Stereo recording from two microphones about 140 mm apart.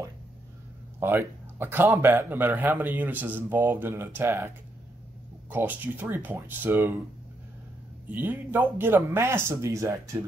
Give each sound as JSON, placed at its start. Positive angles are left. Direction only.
{"t": 0.9, "sound": "a man's voice", "side_deg": -15}
{"t": 5.5, "sound": "a man's voice", "side_deg": -15}
{"t": 8.1, "sound": "a man's voice", "side_deg": -15}